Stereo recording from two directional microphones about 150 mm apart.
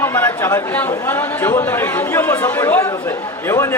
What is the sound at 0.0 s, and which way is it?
Speech, 15° left (ahead or behind).